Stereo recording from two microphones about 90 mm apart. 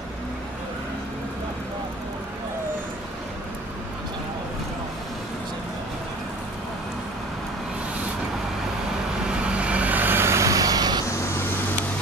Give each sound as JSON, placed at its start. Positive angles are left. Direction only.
{"t": 9.6, "sound": "vehicle", "side_deg": -15}